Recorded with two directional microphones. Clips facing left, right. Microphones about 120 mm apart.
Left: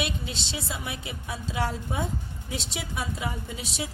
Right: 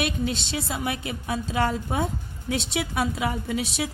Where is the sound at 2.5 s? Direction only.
75° right (ahead or behind).